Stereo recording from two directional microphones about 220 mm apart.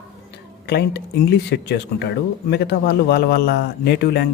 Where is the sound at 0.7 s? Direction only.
50° left (ahead or behind).